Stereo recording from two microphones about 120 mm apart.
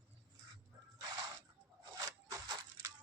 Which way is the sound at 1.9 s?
30° right (ahead or behind).